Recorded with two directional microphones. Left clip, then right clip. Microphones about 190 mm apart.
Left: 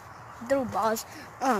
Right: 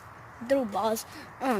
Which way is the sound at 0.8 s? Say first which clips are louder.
Left 1 dB; 10° right (ahead or behind).